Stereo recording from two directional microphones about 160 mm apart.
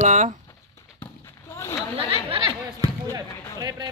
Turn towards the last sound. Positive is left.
turn(degrees=-20)  # may be behind; listen again after turning